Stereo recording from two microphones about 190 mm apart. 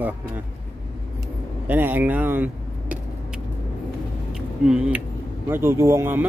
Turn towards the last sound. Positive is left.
turn(degrees=-10)  # may be behind; listen again after turning